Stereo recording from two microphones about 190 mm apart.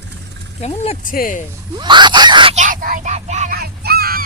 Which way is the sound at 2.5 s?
45° right (ahead or behind).